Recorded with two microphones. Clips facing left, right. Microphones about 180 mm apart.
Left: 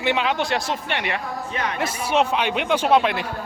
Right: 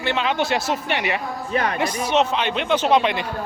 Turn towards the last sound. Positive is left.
turn(degrees=5)  # may be behind; listen again after turning